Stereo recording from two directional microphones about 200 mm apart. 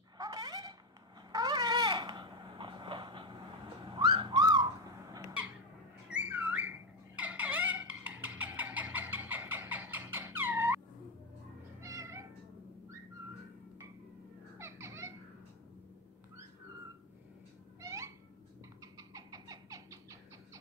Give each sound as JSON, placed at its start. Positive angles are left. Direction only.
{"t": 0.2, "sound": "a sound", "side_deg": -20}
{"t": 11.8, "sound": "cat", "side_deg": -15}
{"t": 14.6, "sound": "music", "side_deg": -15}
{"t": 17.7, "sound": "owl", "side_deg": -15}